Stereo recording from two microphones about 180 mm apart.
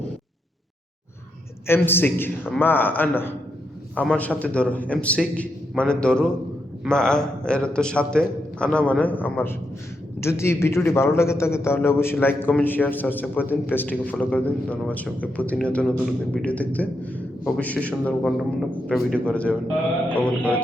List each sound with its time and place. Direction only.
1.6 s a man's voice: 10° left (ahead or behind)